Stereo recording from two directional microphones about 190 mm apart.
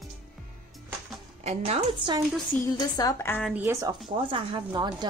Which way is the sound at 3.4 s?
10° right (ahead or behind).